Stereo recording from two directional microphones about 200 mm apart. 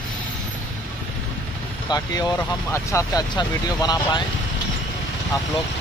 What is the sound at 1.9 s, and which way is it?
Speech, 15° left (ahead or behind).